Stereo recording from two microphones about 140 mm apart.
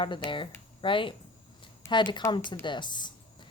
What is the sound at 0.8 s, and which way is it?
A woman's voice, 35° left (ahead or behind).